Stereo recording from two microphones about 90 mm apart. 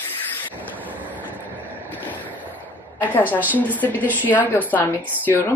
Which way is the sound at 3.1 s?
20° left (ahead or behind).